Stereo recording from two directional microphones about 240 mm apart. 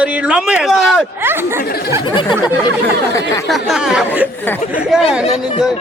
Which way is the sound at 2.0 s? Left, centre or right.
Centre.